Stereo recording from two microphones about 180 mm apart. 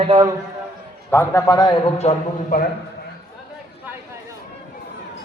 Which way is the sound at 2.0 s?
35° left (ahead or behind).